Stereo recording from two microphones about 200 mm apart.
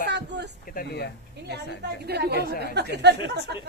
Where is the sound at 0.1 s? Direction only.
60° right (ahead or behind).